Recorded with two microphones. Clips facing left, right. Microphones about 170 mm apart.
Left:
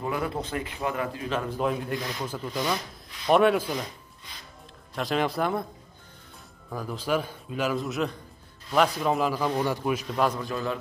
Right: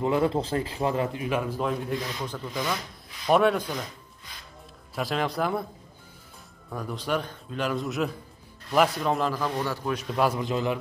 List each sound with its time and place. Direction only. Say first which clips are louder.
0.0 s a man's voice: right 6 dB; 25° right (ahead or behind)
1.5 s a man's voice: even; centre (ahead or behind)
4.9 s a man's voice: left 1 dB; centre (ahead or behind)
6.7 s a man's voice: left 1 dB; centre (ahead or behind)
9.9 s a man's voice: right 1 dB; 5° right (ahead or behind)
10.4 s a man's voice: right 3 dB; 20° right (ahead or behind)